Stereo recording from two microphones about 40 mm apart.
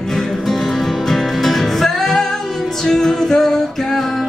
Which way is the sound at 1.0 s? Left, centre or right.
Centre.